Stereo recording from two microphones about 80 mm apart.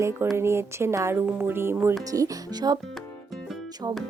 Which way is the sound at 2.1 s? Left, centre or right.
Right.